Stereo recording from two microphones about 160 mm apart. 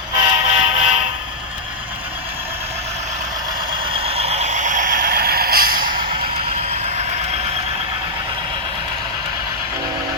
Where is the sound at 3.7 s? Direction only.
35° right (ahead or behind); by 6.0 s 65° right (ahead or behind).